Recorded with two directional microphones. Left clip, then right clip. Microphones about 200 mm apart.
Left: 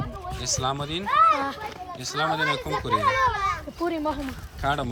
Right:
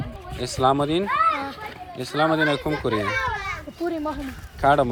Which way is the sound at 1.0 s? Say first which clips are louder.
Left 6 dB; 45° left (ahead or behind).